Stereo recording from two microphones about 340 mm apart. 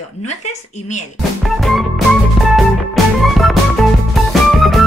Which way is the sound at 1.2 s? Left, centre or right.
Centre.